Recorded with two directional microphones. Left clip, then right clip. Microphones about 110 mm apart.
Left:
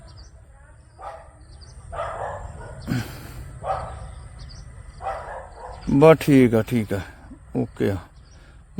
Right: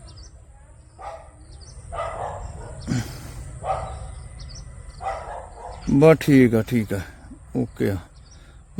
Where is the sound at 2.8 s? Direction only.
5° right (ahead or behind).